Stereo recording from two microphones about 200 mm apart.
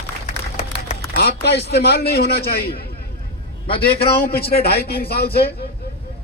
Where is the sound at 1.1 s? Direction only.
55° left (ahead or behind).